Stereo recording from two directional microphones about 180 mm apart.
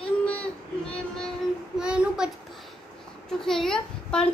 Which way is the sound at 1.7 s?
5° right (ahead or behind).